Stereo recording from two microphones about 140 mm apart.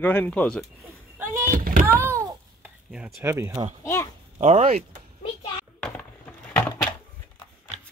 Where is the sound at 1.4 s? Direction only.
85° right.